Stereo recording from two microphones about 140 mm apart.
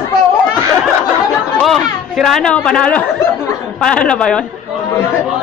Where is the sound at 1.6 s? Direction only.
Centre (ahead or behind).